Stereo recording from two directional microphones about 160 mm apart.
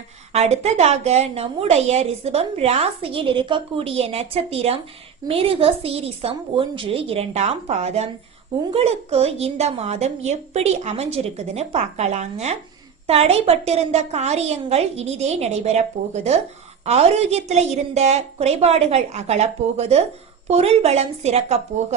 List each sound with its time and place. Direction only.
0.3 s a woman's voice: 40° right (ahead or behind)